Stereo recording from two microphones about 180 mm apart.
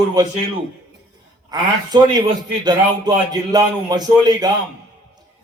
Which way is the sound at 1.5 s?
20° right (ahead or behind).